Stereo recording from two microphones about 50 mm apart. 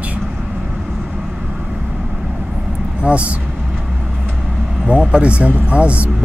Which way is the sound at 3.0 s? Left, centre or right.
Right.